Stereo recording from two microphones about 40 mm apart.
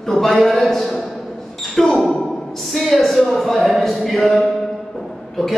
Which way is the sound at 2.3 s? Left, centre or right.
Centre.